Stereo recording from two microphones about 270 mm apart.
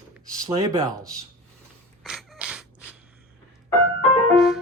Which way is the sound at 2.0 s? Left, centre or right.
Centre.